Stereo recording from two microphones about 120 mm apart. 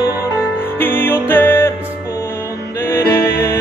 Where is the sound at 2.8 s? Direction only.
20° left (ahead or behind).